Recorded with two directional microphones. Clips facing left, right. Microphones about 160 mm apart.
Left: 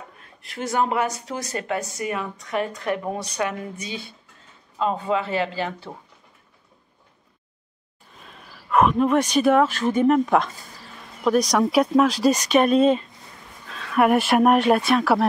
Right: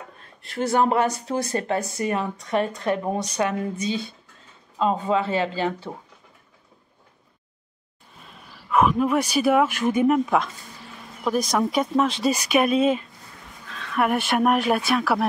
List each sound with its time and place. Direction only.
0.2 s speech: 35° right (ahead or behind)
4.7 s speech: 20° right (ahead or behind)
8.6 s speech: centre (ahead or behind)